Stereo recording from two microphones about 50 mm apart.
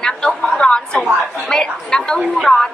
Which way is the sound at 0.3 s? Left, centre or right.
Centre.